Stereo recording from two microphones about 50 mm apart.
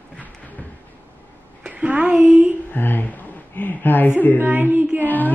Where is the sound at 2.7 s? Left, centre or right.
Left.